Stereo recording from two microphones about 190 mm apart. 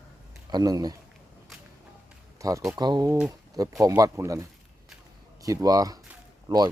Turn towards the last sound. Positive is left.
turn(degrees=-20)  # may be behind; listen again after turning